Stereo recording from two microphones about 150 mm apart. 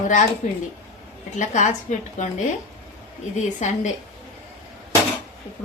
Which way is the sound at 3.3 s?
50° left (ahead or behind).